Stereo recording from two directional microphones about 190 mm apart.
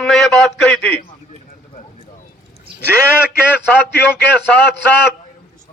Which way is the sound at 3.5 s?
10° left (ahead or behind).